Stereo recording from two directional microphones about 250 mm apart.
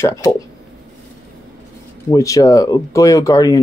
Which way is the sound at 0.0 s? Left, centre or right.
Centre.